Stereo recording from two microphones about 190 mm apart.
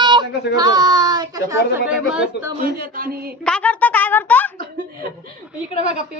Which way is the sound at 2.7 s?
50° right (ahead or behind).